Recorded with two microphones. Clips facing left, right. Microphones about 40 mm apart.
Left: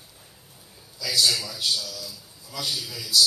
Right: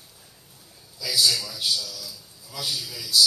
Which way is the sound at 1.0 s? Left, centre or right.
Centre.